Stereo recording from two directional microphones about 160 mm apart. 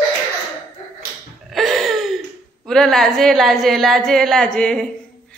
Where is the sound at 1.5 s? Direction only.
Centre (ahead or behind).